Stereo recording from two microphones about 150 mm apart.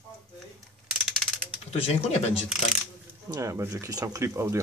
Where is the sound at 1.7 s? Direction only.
40° left (ahead or behind).